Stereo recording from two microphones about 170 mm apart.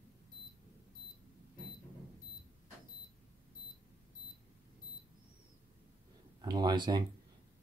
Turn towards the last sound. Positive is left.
turn(degrees=-25)  # may be behind; listen again after turning